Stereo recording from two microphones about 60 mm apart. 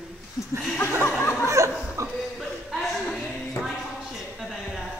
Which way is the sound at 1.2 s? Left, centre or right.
Left.